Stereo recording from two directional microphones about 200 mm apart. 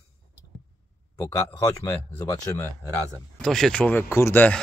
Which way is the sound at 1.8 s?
15° left (ahead or behind).